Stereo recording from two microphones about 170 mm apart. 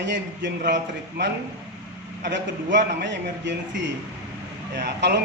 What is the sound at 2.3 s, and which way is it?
Speech, 90° right.